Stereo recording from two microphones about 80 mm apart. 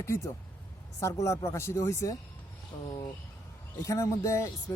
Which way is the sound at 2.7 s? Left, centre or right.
Left.